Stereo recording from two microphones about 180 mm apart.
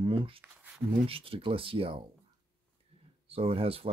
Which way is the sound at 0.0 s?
30° right (ahead or behind).